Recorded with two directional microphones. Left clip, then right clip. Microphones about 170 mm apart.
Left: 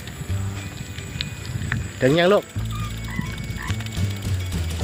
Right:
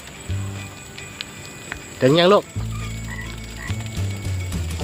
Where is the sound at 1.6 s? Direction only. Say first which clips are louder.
Right 2 dB; 20° right (ahead or behind).